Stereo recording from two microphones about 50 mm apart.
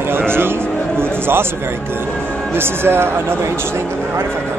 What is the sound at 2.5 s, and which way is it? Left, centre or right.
Speech, right.